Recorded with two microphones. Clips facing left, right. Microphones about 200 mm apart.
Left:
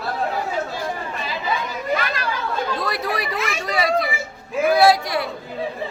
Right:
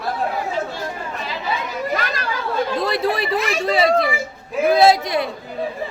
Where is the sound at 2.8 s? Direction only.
25° right (ahead or behind).